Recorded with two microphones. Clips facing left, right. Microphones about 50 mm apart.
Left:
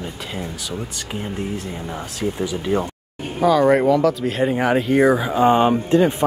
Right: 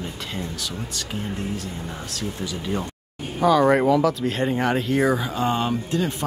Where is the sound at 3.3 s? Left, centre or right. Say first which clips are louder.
Left 2 dB; centre.